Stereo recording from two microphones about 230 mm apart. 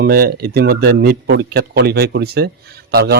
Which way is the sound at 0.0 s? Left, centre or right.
Right.